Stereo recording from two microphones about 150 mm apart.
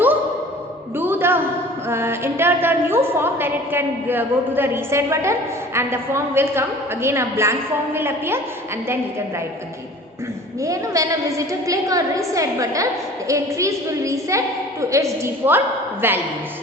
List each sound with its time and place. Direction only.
0.9 s a woman's voice: 15° right (ahead or behind)
10.6 s a woman's voice: 20° right (ahead or behind)